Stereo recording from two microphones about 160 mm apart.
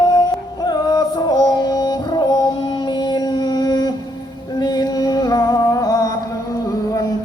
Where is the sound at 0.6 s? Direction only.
25° left (ahead or behind).